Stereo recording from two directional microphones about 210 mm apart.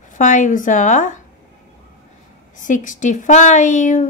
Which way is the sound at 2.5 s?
35° left (ahead or behind).